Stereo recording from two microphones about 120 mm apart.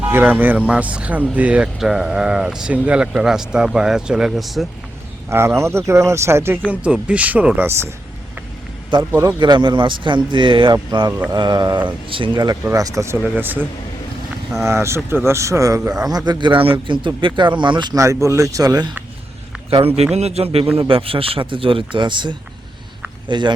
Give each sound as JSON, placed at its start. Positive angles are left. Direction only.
{"t": 0.0, "sound": "speech", "side_deg": -15}
{"t": 5.3, "sound": "speech", "side_deg": -20}
{"t": 6.7, "sound": "speech", "side_deg": -10}
{"t": 9.4, "sound": "a man's voice", "side_deg": -40}
{"t": 11.1, "sound": "speech", "side_deg": -20}
{"t": 11.3, "sound": "a man's voice", "side_deg": -35}
{"t": 13.2, "sound": "a man's voice", "side_deg": -15}
{"t": 18.0, "sound": "speech", "side_deg": -25}
{"t": 20.1, "sound": "a man's voice", "side_deg": -60}